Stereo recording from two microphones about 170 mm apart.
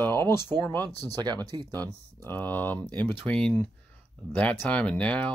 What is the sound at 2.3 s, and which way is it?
Speech, 10° left (ahead or behind).